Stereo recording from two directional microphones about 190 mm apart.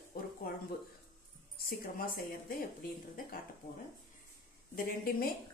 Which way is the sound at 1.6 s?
55° left (ahead or behind).